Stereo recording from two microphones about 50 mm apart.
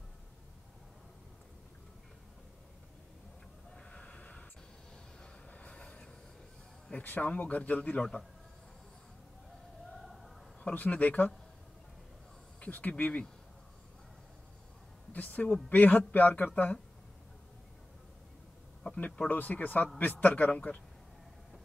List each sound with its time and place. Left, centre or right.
3.7 s snort: left
5.5 s train: left
6.9 s speech: left
10.0 s a sound: centre
10.6 s speech: left
12.5 s speech: left
15.1 s speech: left
18.8 s a sound: left
19.2 s speech: left